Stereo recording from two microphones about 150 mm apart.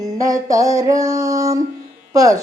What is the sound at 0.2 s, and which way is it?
Speech, 25° right (ahead or behind).